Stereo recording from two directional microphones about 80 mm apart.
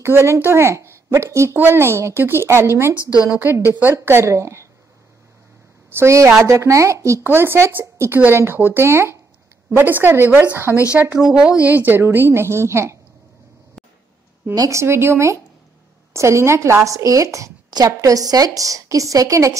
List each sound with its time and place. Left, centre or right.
0.0 s a woman's voice: right
5.9 s speech: right
7.2 s a woman's voice: right
11.1 s a woman's voice: centre; by 13.0 s right
14.5 s a woman's voice: right